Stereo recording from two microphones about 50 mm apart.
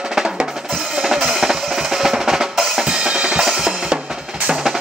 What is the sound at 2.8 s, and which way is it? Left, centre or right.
Drum kit, centre.